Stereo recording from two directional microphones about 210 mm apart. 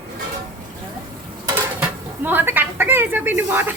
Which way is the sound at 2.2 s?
10° right (ahead or behind).